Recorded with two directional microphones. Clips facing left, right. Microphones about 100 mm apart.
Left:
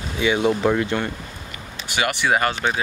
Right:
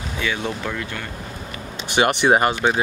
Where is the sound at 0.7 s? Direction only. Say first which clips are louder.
Left 8 dB; 30° left (ahead or behind).